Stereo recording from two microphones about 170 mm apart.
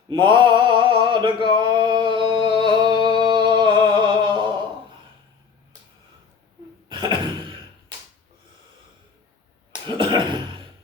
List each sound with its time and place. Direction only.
0.1 s male singing: 30° right (ahead or behind)
6.8 s cough: 25° right (ahead or behind)
9.8 s a sound: 25° right (ahead or behind)